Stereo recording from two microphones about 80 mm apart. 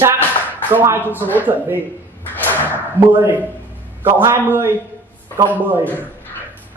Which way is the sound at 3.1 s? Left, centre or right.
Right.